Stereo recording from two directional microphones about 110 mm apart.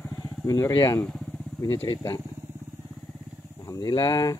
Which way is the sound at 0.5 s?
30° left (ahead or behind).